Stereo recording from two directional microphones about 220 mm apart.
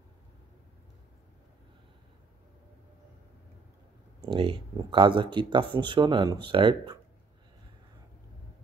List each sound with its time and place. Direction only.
4.2 s speech: 25° right (ahead or behind)